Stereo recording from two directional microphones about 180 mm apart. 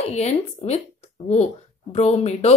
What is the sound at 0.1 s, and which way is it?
A woman's voice, 40° left (ahead or behind).